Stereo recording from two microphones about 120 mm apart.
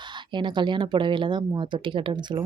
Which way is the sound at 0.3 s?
40° right (ahead or behind).